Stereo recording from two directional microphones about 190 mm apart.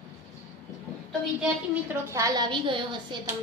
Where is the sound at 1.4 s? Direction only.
10° right (ahead or behind).